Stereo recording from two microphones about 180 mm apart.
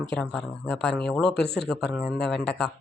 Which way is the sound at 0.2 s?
5° left (ahead or behind).